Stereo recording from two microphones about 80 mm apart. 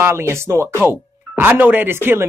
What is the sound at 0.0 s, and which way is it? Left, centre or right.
Speech, right.